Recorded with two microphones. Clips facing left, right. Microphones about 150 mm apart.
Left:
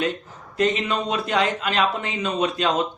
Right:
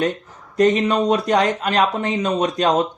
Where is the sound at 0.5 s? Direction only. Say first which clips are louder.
Right 6 dB; 40° right (ahead or behind).